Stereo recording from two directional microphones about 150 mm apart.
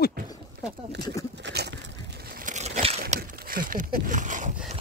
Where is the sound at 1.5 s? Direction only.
90° right; by 3.0 s 45° right (ahead or behind).